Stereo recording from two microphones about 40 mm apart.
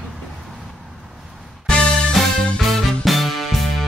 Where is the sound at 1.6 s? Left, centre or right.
Left.